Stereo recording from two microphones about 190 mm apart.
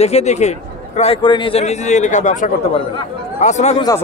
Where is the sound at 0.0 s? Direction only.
35° left (ahead or behind).